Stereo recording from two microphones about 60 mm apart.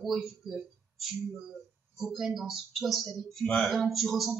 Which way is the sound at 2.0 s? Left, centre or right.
Centre.